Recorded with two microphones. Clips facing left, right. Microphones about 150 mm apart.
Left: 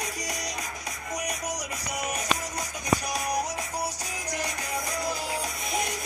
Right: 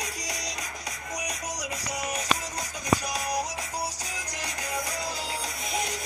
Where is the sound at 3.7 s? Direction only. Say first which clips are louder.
Left 1 dB; 15° right (ahead or behind).